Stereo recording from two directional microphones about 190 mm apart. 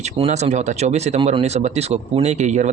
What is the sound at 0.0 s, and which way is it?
Speech, 35° right (ahead or behind).